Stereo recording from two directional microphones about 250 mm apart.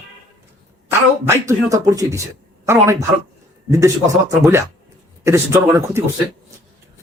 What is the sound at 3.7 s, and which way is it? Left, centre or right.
Speech, centre.